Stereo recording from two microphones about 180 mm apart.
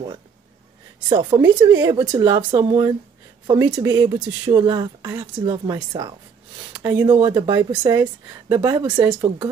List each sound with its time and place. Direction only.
1.0 s speech: 25° right (ahead or behind)
6.8 s speech: 15° right (ahead or behind)
7.2 s speech: 25° right (ahead or behind)